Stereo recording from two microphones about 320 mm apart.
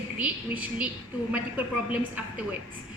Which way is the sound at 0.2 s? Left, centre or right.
Centre.